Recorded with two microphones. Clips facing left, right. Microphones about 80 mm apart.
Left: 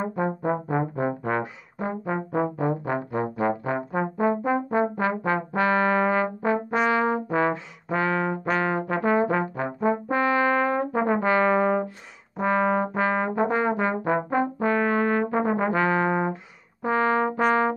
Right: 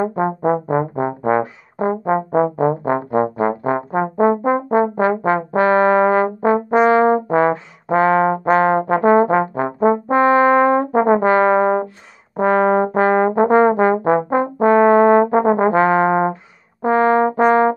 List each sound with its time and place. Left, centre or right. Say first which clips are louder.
0.0 s brass instrument: right 8 dB; right
1.8 s trombone: right 10 dB; right
6.8 s brass instrument: right 11 dB; right
12.4 s brass instrument: right 8 dB; right